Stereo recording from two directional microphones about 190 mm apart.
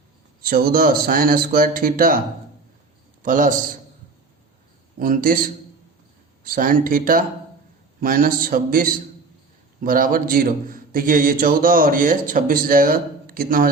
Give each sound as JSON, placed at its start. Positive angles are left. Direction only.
{"t": 0.4, "sound": "a man's voice", "side_deg": -50}
{"t": 3.2, "sound": "a man's voice", "side_deg": -45}
{"t": 4.9, "sound": "a man's voice", "side_deg": -45}
{"t": 6.4, "sound": "a man's voice", "side_deg": -45}